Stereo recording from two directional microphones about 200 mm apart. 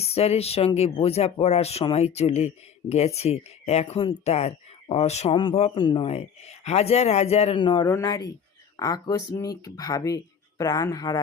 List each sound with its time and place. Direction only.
0.0 s speech: 30° left (ahead or behind)